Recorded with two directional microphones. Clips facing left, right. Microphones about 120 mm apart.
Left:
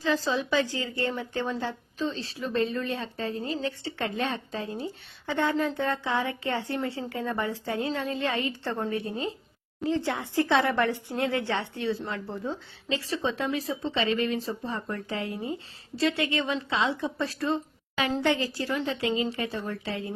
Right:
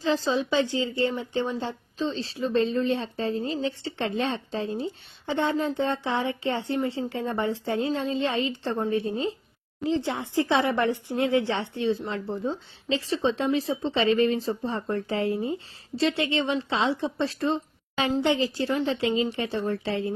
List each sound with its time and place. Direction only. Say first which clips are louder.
0.0 s a woman's voice: right 2 dB; 25° right (ahead or behind)